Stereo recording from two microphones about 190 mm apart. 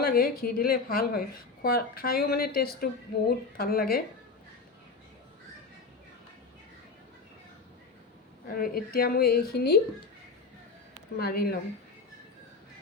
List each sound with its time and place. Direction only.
0.0 s a woman's voice: 50° left (ahead or behind)
8.5 s a woman's voice: 50° left (ahead or behind)
11.2 s speech: 55° left (ahead or behind)